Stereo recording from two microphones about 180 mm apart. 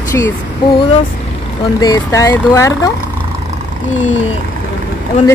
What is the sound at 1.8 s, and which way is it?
Speech, 20° left (ahead or behind).